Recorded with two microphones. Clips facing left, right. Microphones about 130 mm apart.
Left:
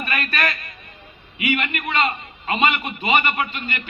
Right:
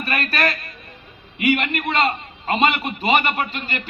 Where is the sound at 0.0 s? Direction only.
35° right (ahead or behind).